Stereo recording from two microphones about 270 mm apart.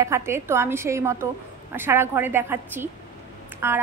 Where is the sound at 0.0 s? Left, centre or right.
Centre.